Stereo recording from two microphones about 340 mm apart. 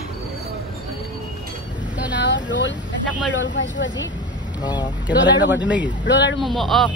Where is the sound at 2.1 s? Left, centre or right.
Left.